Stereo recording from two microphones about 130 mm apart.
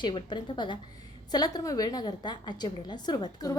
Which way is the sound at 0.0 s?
35° left (ahead or behind).